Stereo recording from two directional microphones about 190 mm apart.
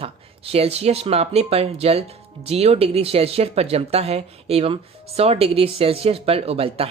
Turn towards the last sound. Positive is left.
turn(degrees=-30)  # may be behind; listen again after turning